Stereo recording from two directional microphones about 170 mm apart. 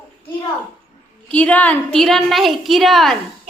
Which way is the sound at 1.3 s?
10° left (ahead or behind).